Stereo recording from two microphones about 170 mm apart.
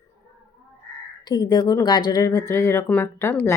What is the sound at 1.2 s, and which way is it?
Speech, 25° left (ahead or behind).